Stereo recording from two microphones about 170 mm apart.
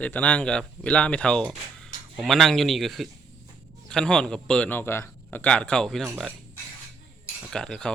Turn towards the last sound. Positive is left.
turn(degrees=5)  # may be behind; listen again after turning